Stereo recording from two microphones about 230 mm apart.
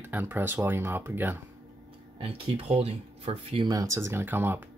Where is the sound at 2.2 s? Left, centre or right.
Right; by 4.6 s centre.